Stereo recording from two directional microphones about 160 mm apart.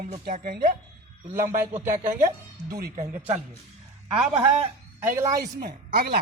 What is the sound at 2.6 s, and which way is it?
Speech, 70° right (ahead or behind).